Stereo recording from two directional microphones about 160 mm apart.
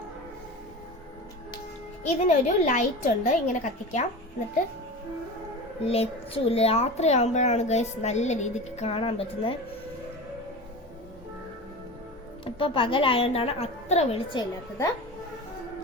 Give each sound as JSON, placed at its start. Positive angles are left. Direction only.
{"t": 2.0, "sound": "a child's voice", "side_deg": 50}
{"t": 5.8, "sound": "a child's voice", "side_deg": 40}
{"t": 12.5, "sound": "a woman's voice", "side_deg": 30}